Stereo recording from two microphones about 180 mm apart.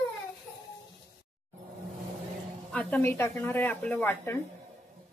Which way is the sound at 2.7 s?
10° left (ahead or behind).